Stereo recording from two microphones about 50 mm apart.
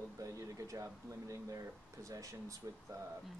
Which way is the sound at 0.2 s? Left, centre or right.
Right.